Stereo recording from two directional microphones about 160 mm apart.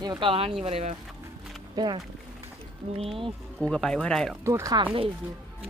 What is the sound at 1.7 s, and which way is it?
Speech, 30° right (ahead or behind).